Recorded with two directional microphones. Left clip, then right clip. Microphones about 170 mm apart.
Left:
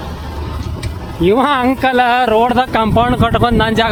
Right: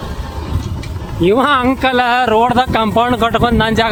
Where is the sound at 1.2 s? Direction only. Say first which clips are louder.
Even; centre (ahead or behind).